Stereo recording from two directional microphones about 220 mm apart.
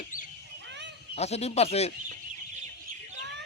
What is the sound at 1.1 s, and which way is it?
Speech, 30° left (ahead or behind).